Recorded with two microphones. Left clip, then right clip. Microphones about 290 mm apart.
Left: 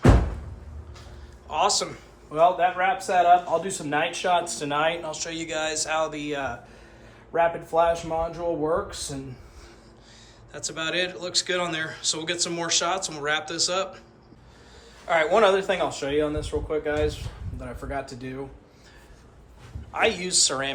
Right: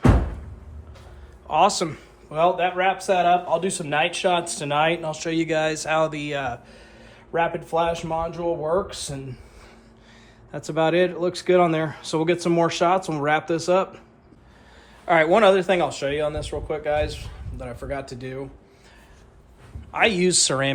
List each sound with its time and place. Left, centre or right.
1.5 s a man's voice: right
10.5 s a man's voice: right
15.0 s a man's voice: right
19.9 s a man's voice: right